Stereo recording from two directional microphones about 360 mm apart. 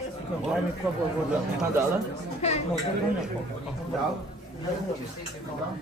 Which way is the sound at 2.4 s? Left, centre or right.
Centre.